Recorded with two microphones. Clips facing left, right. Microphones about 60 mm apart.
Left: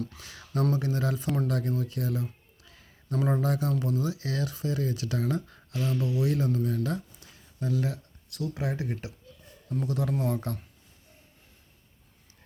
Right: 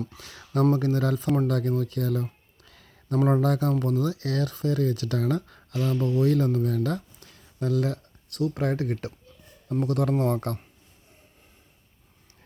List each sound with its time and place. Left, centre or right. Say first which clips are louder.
0.6 s speech: right 5 dB; right
1.5 s a sound: right 4 dB; right
3.4 s speech: right 4 dB; right
6.8 s a sound: right 3 dB; right
8.4 s speech: right 6 dB; right
8.7 s speech: right 5 dB; right